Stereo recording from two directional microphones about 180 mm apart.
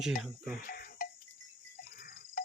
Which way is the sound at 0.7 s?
50° left (ahead or behind).